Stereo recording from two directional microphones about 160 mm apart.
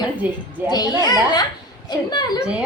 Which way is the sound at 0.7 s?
25° left (ahead or behind).